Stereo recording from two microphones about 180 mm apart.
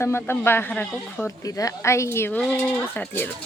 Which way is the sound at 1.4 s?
20° left (ahead or behind).